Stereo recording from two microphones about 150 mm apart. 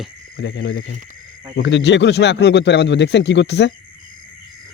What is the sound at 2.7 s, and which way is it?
Speech, 90° left.